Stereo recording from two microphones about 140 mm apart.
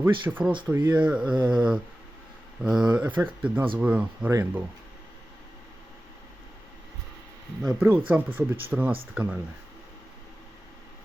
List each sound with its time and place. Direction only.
0.0 s speech: 15° right (ahead or behind)
4.3 s speech: 20° right (ahead or behind)
7.6 s speech: centre (ahead or behind)
7.9 s speech: 10° right (ahead or behind)